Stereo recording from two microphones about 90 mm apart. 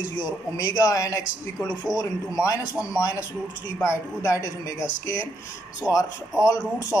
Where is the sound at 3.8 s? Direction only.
35° left (ahead or behind).